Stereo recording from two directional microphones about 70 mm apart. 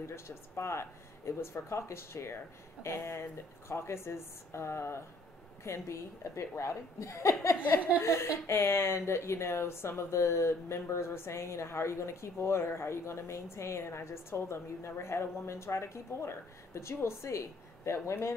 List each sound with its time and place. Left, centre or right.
0.0 s a woman's voice: left